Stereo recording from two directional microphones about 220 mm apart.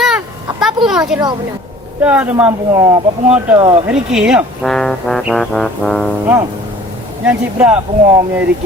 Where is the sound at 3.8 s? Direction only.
5° right (ahead or behind).